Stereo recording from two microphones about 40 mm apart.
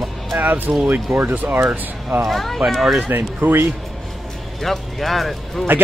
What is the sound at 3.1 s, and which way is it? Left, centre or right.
Speech, right.